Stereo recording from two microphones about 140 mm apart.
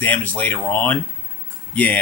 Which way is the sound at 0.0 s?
10° left (ahead or behind).